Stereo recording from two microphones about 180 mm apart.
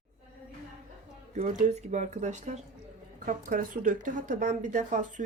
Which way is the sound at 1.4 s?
40° right (ahead or behind).